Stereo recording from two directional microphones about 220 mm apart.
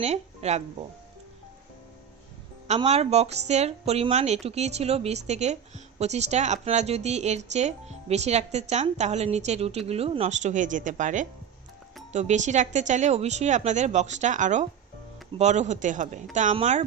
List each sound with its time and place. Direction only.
0.0 s speech: 30° right (ahead or behind)
2.6 s a woman's voice: 30° right (ahead or behind)